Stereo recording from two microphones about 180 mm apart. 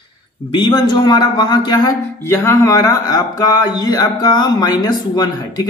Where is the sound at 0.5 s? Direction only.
25° left (ahead or behind).